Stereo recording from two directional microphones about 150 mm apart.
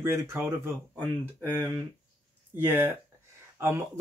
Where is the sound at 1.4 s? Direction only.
10° left (ahead or behind).